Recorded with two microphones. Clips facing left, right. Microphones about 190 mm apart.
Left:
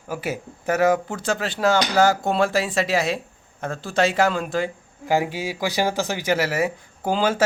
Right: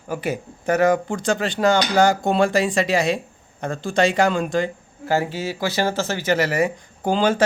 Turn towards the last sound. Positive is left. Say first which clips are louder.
# right 2 dB
turn(degrees=5)  # may be behind; listen again after turning